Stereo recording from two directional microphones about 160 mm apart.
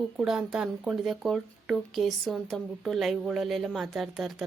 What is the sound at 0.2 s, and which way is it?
Speech, 5° right (ahead or behind).